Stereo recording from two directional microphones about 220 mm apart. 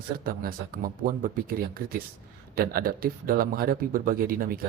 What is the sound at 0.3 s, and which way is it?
A man's voice, 40° right (ahead or behind).